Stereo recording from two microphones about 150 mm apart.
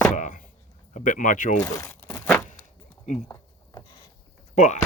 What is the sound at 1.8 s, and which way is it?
Crumpling, 20° left (ahead or behind).